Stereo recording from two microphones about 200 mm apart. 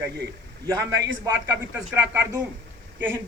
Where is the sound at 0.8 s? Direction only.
15° right (ahead or behind).